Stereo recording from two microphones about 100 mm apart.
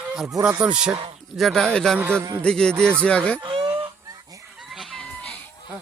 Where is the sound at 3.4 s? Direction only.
50° right (ahead or behind).